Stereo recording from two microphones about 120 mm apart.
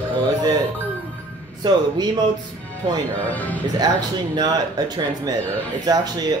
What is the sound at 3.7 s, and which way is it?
Speech, 35° right (ahead or behind).